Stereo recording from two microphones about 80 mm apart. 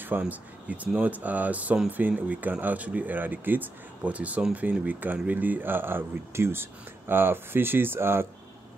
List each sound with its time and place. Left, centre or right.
0.0 s speech: right